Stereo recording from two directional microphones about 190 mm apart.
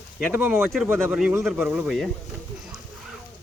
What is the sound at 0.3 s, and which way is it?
Speech, 10° right (ahead or behind).